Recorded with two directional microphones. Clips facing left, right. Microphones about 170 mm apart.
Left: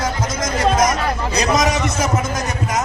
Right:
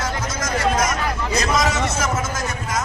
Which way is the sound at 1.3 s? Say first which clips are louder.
Left 3 dB; 20° left (ahead or behind).